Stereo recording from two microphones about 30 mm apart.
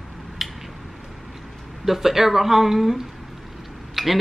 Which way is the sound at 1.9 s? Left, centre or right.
Centre.